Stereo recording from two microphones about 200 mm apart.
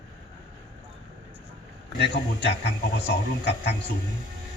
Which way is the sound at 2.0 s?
55° left (ahead or behind).